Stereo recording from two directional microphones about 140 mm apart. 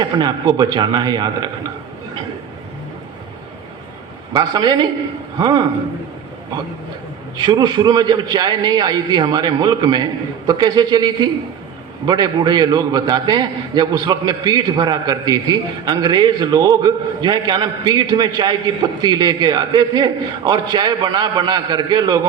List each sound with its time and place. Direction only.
0.0 s a man's voice: 30° right (ahead or behind)
4.4 s a man's voice: 30° right (ahead or behind)
7.3 s a man's voice: 30° right (ahead or behind)